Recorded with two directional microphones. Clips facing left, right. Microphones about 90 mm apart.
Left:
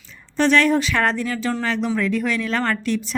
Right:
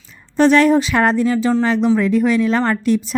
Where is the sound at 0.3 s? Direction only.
40° right (ahead or behind).